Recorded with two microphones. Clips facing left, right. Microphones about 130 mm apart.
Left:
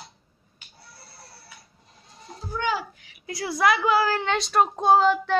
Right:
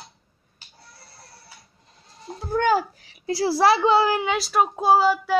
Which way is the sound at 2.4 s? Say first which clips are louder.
Right 7 dB; 50° right (ahead or behind).